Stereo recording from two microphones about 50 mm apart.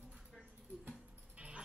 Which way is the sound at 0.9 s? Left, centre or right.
Right.